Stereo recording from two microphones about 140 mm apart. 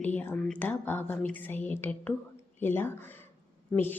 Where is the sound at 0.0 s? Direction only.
15° left (ahead or behind).